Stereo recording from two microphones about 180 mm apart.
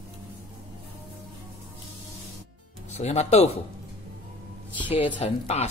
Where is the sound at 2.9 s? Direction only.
40° left (ahead or behind).